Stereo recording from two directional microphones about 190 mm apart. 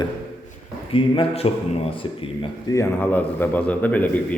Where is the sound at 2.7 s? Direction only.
10° left (ahead or behind).